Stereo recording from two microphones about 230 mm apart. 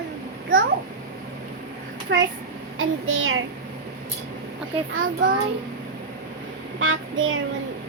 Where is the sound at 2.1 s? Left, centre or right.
Right.